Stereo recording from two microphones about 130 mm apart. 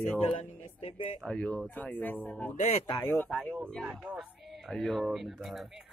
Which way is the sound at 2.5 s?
60° left (ahead or behind).